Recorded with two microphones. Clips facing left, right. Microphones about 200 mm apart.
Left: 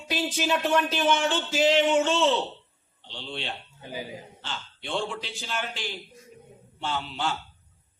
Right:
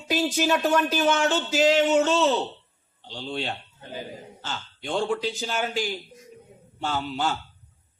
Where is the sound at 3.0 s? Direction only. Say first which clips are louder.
Right 5 dB; 40° right (ahead or behind).